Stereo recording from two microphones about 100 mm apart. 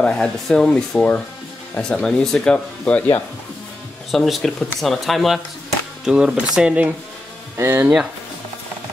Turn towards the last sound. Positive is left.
turn(degrees=-25)  # may be behind; listen again after turning